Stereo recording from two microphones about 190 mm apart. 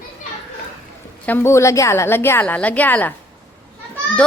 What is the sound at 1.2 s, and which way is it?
A woman's voice, 10° left (ahead or behind).